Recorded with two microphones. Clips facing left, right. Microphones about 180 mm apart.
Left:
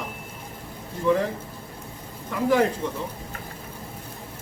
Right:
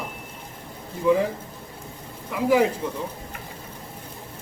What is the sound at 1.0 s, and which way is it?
Speech, 5° right (ahead or behind).